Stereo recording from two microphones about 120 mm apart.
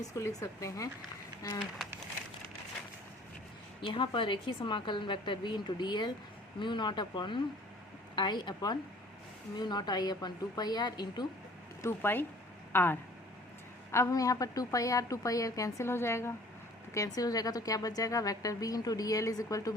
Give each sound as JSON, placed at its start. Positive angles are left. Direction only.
{"t": 0.1, "sound": "a woman's voice", "side_deg": 25}
{"t": 3.8, "sound": "a woman's voice", "side_deg": 45}
{"t": 11.8, "sound": "a woman's voice", "side_deg": 20}